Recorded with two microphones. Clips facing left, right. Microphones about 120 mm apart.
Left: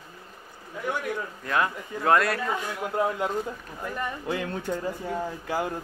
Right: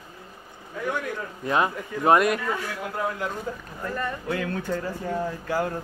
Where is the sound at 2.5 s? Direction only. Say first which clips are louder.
Left 2 dB; 20° left (ahead or behind).